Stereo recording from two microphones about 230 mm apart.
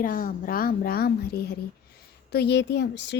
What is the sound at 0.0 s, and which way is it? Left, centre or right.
A woman's voice, left.